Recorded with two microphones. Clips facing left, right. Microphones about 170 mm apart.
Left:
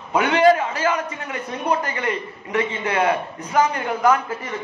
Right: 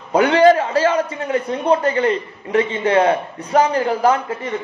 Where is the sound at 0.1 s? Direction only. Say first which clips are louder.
Right 4 dB; 35° right (ahead or behind).